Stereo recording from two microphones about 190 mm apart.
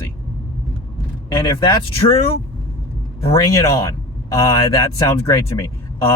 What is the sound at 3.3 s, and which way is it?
Speech, 15° left (ahead or behind).